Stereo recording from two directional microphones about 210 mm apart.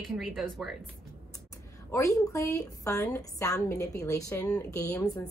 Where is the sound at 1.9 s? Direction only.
15° left (ahead or behind).